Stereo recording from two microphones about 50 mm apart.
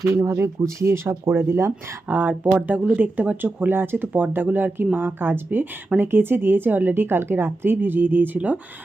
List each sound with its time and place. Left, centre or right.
0.1 s speech: right
2.0 s a woman's voice: right